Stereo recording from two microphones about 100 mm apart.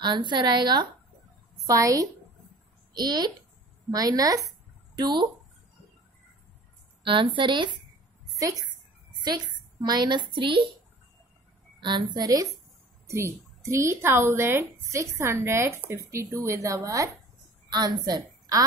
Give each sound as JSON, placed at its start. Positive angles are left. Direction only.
{"t": 0.0, "sound": "speech", "side_deg": -50}
{"t": 1.7, "sound": "speech", "side_deg": -35}
{"t": 2.9, "sound": "a woman's voice", "side_deg": -45}
{"t": 7.0, "sound": "a woman's voice", "side_deg": -55}
{"t": 8.4, "sound": "a woman's voice", "side_deg": -35}
{"t": 9.2, "sound": "speech", "side_deg": -45}
{"t": 11.8, "sound": "speech", "side_deg": -50}
{"t": 13.0, "sound": "a woman's voice", "side_deg": -30}